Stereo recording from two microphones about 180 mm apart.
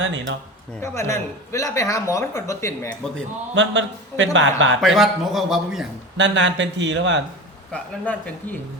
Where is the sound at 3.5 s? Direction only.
90° right.